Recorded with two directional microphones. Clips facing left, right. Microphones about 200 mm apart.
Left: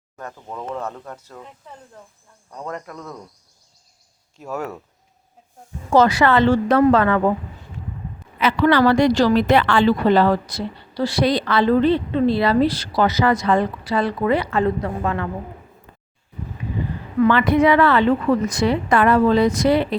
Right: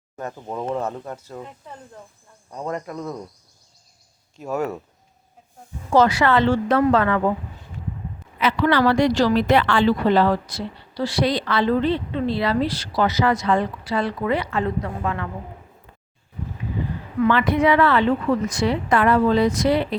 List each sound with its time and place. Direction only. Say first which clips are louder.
0.2 s speech: right 4 dB; 20° right (ahead or behind)
2.5 s speech: right 3 dB; 15° right (ahead or behind)
4.4 s speech: right 3 dB; 5° right (ahead or behind)
5.9 s a woman's voice: left 2 dB; 40° left (ahead or behind)
8.4 s a woman's voice: left 3 dB; 50° left (ahead or behind)
9.6 s a woman's voice: left 2 dB; 60° left (ahead or behind)
10.9 s a woman's voice: left 3 dB; 40° left (ahead or behind)
17.2 s a woman's voice: left 2 dB; 50° left (ahead or behind)
18.4 s a woman's voice: left 2 dB; 40° left (ahead or behind)
18.9 s a woman's voice: left 2 dB; 55° left (ahead or behind)